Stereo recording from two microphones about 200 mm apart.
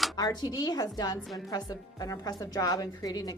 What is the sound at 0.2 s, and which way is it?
A woman's voice, 20° left (ahead or behind).